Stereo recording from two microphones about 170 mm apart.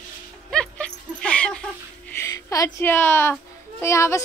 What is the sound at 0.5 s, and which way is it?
Dog, 5° left (ahead or behind).